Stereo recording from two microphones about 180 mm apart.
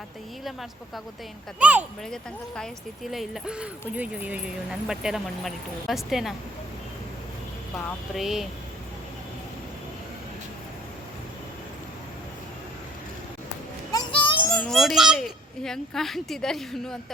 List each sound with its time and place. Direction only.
1.5 s speech: 5° right (ahead or behind)
8.1 s speech: centre (ahead or behind)
13.9 s child singing: 25° left (ahead or behind)
14.5 s speech: 5° left (ahead or behind)